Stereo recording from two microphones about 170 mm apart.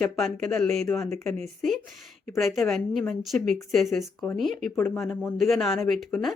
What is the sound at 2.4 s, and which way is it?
A woman's voice, centre (ahead or behind).